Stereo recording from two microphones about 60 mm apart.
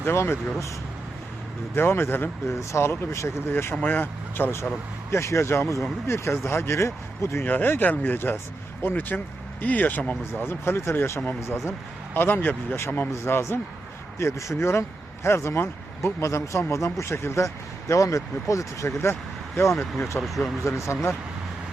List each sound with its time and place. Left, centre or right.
0.0 s speech: left
1.7 s speech: left
3.1 s speech: left
3.5 s speech: left
3.8 s speech: left
5.1 s speech: left
7.4 s speech: left
10.3 s speech: left
12.1 s speech: left
14.2 s a man's voice: left
20.2 s speech: centre
20.7 s a man's voice: left